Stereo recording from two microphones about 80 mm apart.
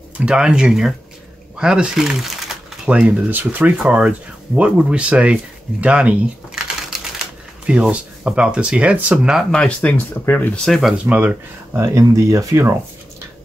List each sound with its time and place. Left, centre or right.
0.2 s speech: centre
9.5 s speech: centre
11.1 s speech: centre
11.8 s speech: right